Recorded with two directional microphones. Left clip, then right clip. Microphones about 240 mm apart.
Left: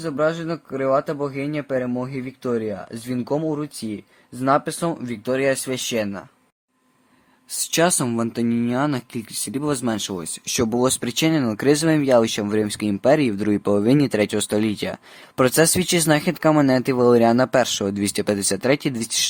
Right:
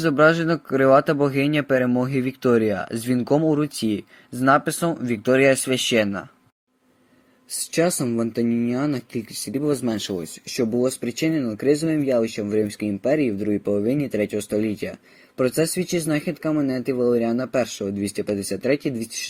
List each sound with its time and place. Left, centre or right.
0.0 s speech: centre
7.7 s speech: centre